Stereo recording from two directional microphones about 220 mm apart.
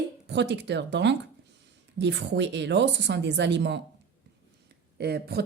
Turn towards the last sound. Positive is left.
turn(degrees=-45)  # may be behind; listen again after turning